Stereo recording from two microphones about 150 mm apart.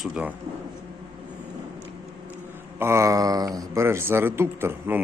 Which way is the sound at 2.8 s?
15° right (ahead or behind).